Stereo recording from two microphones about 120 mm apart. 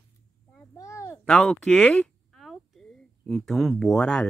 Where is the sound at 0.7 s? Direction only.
30° left (ahead or behind).